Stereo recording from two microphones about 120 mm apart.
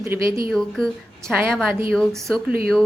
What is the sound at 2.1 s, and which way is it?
Speech, 5° left (ahead or behind).